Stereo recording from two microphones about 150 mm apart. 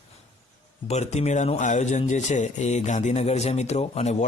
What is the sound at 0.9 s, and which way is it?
Speech, 45° left (ahead or behind).